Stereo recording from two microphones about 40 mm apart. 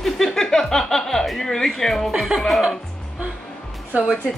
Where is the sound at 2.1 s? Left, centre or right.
Centre.